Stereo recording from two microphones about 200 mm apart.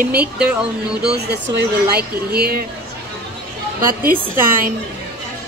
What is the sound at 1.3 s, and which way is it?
Speech, 55° right (ahead or behind).